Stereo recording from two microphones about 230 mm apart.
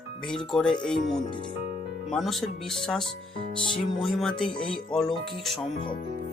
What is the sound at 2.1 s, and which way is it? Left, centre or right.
Speech, centre.